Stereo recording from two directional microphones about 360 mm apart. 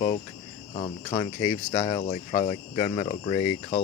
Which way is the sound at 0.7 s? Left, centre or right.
Centre.